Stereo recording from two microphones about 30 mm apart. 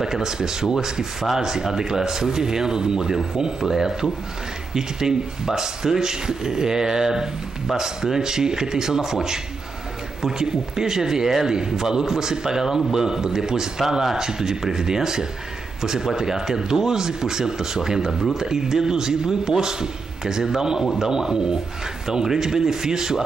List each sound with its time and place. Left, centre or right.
0.0 s speech: centre